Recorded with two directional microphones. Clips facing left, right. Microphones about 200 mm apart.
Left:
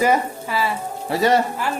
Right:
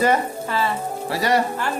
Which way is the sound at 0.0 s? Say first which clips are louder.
Left 1 dB; 10° left (ahead or behind).